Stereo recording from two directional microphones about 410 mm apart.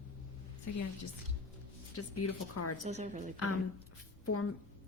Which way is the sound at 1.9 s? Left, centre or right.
Left.